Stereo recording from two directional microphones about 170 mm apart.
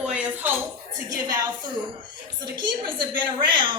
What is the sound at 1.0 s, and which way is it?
A woman's voice, 20° right (ahead or behind).